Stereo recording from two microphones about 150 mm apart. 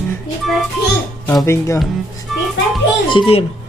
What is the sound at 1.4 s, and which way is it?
Speech, 20° left (ahead or behind).